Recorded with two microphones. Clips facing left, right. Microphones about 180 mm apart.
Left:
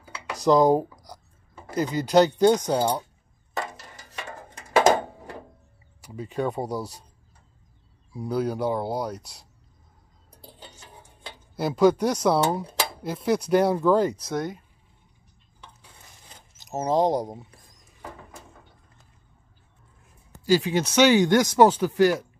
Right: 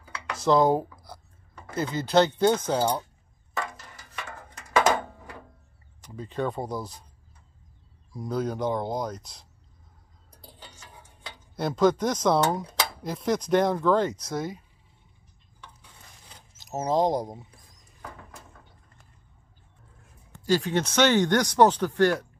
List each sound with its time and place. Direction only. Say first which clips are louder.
0.1 s a sound: left 2 dB; 15° left (ahead or behind)
0.9 s speech: left 1 dB; 15° left (ahead or behind)
3.5 s a sound: left 1 dB; 25° left (ahead or behind)
5.9 s speech: left 2 dB; 10° left (ahead or behind)
8.1 s speech: left 3 dB; 10° left (ahead or behind)
10.4 s stir: left 2 dB; 20° left (ahead or behind)
11.5 s speech: left 3 dB; 10° left (ahead or behind)
14.3 s speech: left 2 dB; 5° right (ahead or behind)
16.6 s speech: left 2 dB; centre (ahead or behind)
20.3 s speech: left 3 dB; 5° left (ahead or behind)